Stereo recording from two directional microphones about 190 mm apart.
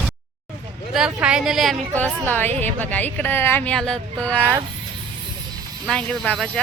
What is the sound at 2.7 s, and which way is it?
Speech, 10° left (ahead or behind).